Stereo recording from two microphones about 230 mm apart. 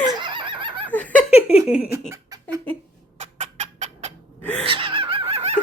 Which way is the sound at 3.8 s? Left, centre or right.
Right.